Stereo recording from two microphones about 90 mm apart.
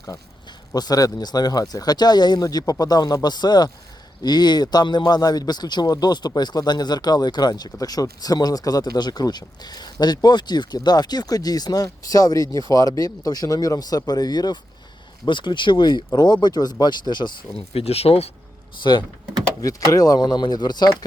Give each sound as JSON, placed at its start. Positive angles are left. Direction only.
{"t": 0.7, "sound": "a man's voice", "side_deg": 45}
{"t": 15.3, "sound": "a man's voice", "side_deg": 60}
{"t": 17.6, "sound": "speech", "side_deg": 90}
{"t": 18.8, "sound": "speech", "side_deg": 60}
{"t": 19.6, "sound": "a man's voice", "side_deg": 40}